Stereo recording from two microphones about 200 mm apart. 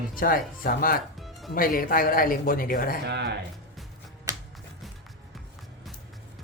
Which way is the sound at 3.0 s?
55° right (ahead or behind).